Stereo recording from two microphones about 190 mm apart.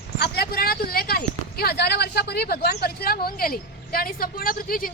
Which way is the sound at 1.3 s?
55° left (ahead or behind).